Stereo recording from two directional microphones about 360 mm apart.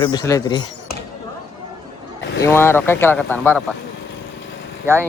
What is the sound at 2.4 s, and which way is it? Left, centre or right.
Speech, centre.